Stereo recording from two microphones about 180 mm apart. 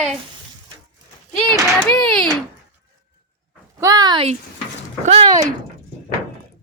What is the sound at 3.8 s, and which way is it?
Speech, 20° right (ahead or behind).